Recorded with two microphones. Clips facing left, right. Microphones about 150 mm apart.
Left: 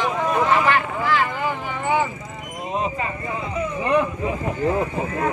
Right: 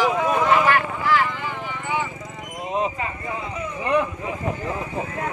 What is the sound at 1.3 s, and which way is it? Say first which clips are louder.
Vehicle: left 4 dB; 45° left (ahead or behind).